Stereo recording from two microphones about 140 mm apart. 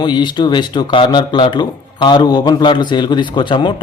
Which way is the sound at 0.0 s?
30° left (ahead or behind).